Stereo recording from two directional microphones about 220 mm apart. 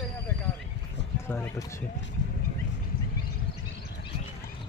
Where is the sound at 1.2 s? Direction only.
10° left (ahead or behind).